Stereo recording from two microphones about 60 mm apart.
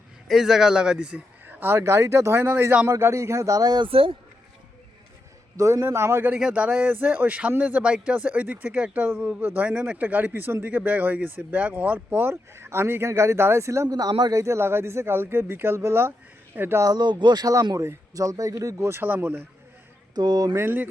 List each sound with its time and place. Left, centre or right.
0.3 s speech: centre
1.5 s speech: right
3.0 s speech: right
5.5 s speech: right
6.4 s speech: centre
6.9 s speech: right
9.6 s speech: centre
12.1 s speech: right
13.9 s speech: right
14.4 s speech: right
17.4 s speech: right
18.8 s speech: right
19.0 s speech: right
20.5 s speech: right